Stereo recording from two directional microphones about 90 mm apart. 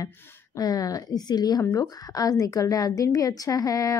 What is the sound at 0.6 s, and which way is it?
A woman's voice, 45° left (ahead or behind).